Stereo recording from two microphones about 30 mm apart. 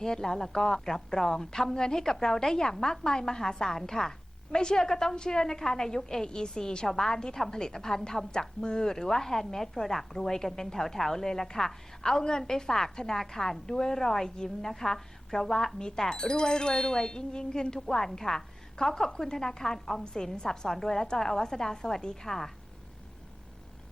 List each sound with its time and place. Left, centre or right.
0.0 s a woman's voice: centre
6.2 s a woman's voice: left
8.3 s a woman's voice: left
17.7 s a woman's voice: centre
20.3 s speech: left
20.7 s a woman's voice: centre
22.3 s a woman's voice: centre